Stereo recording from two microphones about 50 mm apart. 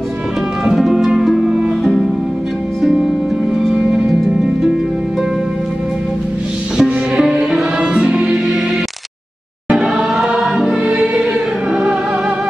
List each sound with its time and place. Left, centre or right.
0.7 s music: centre
2.8 s music: centre
6.8 s music: centre
9.7 s music: centre